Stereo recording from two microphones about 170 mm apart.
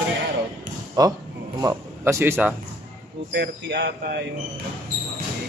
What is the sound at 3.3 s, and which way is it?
Speech, 85° right.